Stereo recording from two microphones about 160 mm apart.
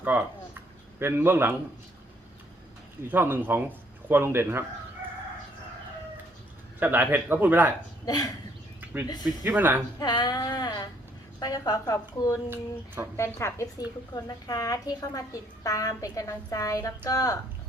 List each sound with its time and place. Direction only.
0.0 s speech: 10° right (ahead or behind)
3.0 s speech: 10° right (ahead or behind)
6.7 s speech: 10° right (ahead or behind)
8.0 s a woman's voice: 25° left (ahead or behind)
9.4 s speech: 10° right (ahead or behind)
10.0 s a woman's voice: 25° left (ahead or behind)